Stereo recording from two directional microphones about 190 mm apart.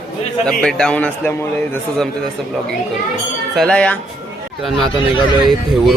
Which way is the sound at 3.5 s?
5° left (ahead or behind).